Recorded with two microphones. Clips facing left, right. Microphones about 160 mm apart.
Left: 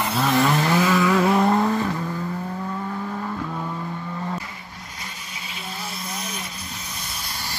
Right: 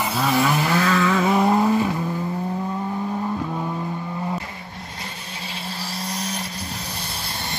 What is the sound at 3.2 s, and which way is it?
Vehicle, 15° right (ahead or behind).